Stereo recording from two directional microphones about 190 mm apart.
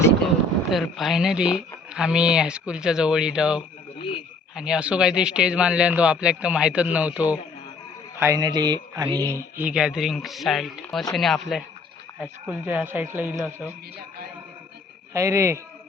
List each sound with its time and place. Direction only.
0.7 s speech: centre (ahead or behind)
8.2 s speech: 20° right (ahead or behind); by 11.6 s centre (ahead or behind)
12.2 s speech: 10° right (ahead or behind)
15.1 s speech: 15° right (ahead or behind)